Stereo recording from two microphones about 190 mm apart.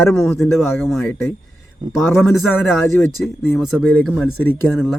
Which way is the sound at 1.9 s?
Centre (ahead or behind).